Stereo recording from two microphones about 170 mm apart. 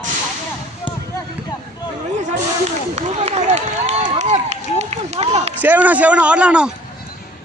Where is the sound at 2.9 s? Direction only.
40° right (ahead or behind).